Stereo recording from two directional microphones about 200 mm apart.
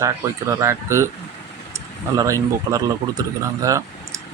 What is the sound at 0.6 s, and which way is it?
Speech, 15° right (ahead or behind).